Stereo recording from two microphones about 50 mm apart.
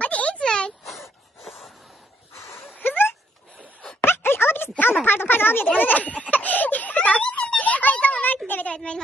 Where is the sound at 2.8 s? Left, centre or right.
Left.